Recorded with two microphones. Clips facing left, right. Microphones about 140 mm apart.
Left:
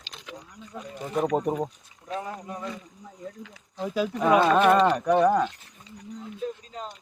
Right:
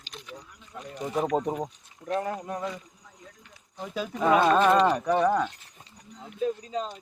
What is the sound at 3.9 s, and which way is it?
Speech, 5° left (ahead or behind).